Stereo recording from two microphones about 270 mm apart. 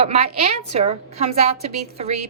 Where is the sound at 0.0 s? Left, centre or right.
Right.